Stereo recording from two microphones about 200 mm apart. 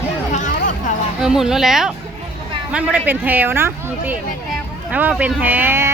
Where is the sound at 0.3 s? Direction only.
40° left (ahead or behind).